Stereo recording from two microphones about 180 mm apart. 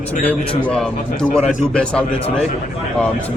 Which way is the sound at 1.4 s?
45° left (ahead or behind).